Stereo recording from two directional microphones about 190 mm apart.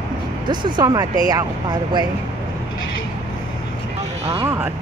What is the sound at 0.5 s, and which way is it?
Speech, 25° right (ahead or behind).